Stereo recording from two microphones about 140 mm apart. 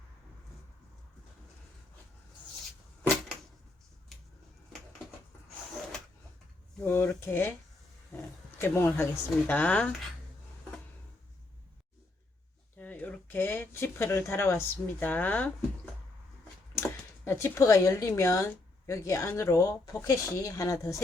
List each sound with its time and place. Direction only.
4.1 s a sound: centre (ahead or behind)
6.8 s speech: 15° left (ahead or behind)
8.1 s roaring cats: 15° left (ahead or behind)
9.5 s speech: 10° left (ahead or behind)
12.7 s speech: 10° left (ahead or behind)
16.7 s a sound: 20° left (ahead or behind)
18.2 s speech: 20° left (ahead or behind)